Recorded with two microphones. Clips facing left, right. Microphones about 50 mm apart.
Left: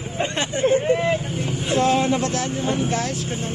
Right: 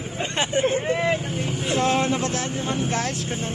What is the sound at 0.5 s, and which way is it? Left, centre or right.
Speech, right.